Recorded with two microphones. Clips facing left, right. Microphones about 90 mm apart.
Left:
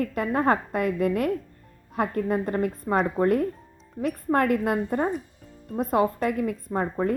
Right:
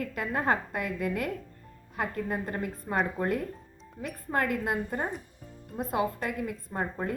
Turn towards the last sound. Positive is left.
turn(degrees=50)  # may be behind; listen again after turning